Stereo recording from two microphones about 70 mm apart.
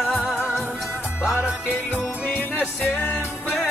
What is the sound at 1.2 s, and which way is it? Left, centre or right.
Music, centre.